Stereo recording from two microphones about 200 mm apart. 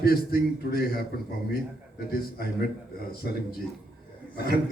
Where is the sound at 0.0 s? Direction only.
50° left (ahead or behind).